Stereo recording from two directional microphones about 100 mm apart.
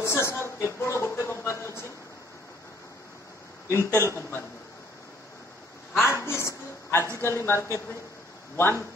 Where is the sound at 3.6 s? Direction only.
25° left (ahead or behind).